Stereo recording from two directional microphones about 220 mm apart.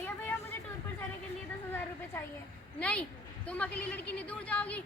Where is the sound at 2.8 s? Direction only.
5° left (ahead or behind).